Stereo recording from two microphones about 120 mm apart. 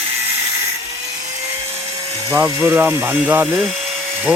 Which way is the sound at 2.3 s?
25° right (ahead or behind).